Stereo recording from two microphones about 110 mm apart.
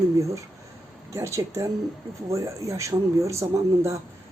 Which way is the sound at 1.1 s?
25° right (ahead or behind).